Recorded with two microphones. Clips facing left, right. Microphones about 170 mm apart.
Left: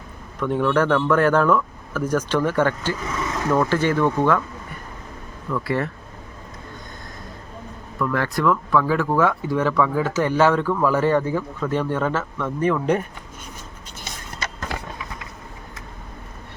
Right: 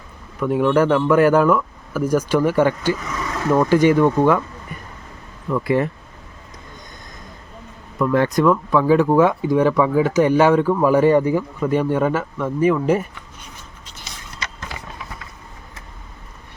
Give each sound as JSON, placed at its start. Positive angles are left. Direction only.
{"t": 0.3, "sound": "speech", "side_deg": -10}
{"t": 5.5, "sound": "speech", "side_deg": -15}
{"t": 7.9, "sound": "speech", "side_deg": -20}
{"t": 14.0, "sound": "skateboard", "side_deg": 50}